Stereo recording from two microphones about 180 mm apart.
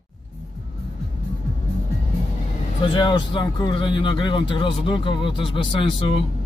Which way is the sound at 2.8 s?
25° left (ahead or behind).